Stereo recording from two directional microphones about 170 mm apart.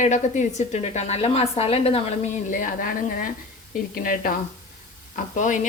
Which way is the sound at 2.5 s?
55° left (ahead or behind).